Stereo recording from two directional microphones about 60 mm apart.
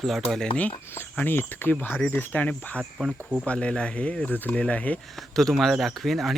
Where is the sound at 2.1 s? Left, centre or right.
Left.